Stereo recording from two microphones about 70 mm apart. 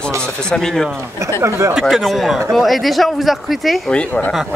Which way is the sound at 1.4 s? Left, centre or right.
Right.